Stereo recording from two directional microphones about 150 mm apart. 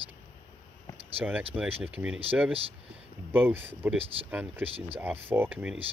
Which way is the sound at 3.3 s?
15° right (ahead or behind).